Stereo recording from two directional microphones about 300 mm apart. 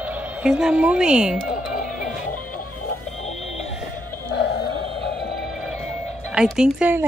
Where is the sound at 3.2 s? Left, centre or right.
Left.